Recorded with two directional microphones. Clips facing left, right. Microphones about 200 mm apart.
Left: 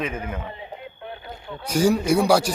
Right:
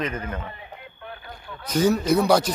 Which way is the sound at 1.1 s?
25° left (ahead or behind).